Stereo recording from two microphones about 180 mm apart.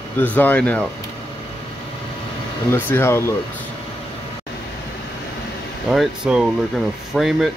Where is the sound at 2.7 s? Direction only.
15° left (ahead or behind).